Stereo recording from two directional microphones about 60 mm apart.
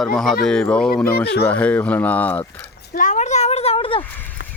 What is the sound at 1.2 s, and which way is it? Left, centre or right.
Speech, left.